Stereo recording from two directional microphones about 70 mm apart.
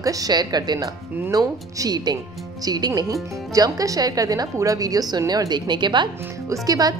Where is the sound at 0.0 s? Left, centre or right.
Right.